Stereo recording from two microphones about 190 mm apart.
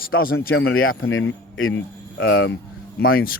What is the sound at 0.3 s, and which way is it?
A man's voice, 90° left.